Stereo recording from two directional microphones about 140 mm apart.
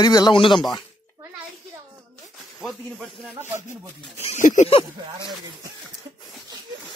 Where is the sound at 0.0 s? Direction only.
30° left (ahead or behind).